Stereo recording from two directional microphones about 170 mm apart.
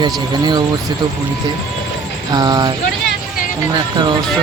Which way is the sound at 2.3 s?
25° right (ahead or behind).